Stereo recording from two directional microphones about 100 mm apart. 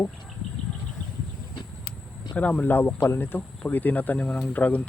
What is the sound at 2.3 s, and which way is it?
Speech, 15° left (ahead or behind).